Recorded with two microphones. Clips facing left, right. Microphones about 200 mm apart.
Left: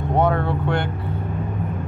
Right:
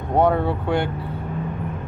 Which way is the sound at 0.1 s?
10° right (ahead or behind).